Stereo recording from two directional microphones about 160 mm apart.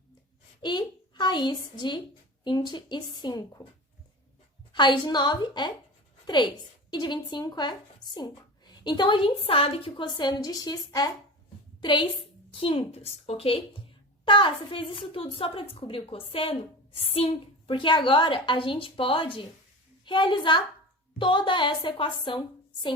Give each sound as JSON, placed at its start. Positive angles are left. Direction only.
{"t": 0.6, "sound": "a woman's voice", "side_deg": 30}
{"t": 4.7, "sound": "a woman's voice", "side_deg": 30}